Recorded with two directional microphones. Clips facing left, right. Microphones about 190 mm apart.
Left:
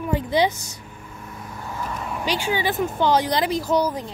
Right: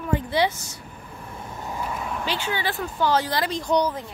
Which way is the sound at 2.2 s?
15° left (ahead or behind).